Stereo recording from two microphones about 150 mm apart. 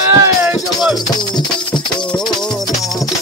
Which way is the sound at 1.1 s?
30° left (ahead or behind).